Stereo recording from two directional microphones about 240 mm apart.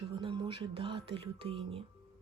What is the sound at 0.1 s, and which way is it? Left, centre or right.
Speech, right.